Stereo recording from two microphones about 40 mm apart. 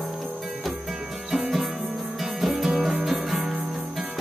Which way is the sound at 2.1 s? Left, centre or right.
Centre.